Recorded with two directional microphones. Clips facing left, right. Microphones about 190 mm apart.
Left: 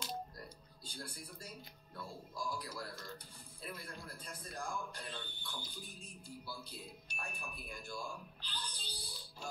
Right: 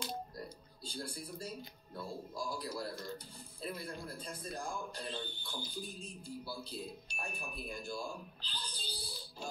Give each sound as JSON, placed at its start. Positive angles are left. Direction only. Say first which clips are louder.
{"t": 0.4, "sound": "speech", "louder": "right 6 dB", "side_deg": -30}